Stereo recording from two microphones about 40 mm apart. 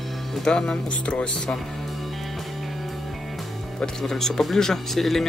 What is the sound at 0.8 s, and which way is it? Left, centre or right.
Speech, left.